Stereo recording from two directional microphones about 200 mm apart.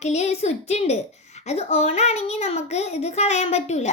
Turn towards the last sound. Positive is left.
turn(degrees=35)  # may be behind; listen again after turning